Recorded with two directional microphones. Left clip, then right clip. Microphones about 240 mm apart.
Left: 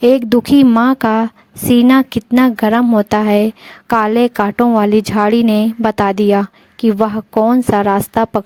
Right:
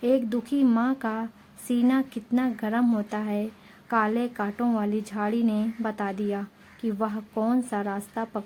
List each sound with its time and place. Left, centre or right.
0.0 s a woman's voice: left